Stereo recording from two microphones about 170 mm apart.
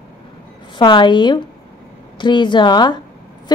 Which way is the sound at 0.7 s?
25° left (ahead or behind).